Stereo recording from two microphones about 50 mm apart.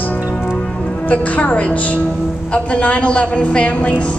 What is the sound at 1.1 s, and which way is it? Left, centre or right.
A woman's voice, left.